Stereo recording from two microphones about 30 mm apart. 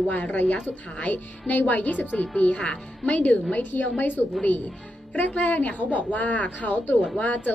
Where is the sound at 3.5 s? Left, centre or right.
Left.